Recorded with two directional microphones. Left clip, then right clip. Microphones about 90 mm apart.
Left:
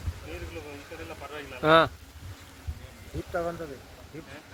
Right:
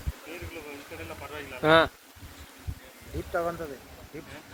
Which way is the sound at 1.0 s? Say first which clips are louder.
Even; 25° left (ahead or behind).